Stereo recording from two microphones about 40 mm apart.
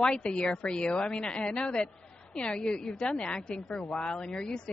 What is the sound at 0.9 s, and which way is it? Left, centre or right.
A woman's voice, centre.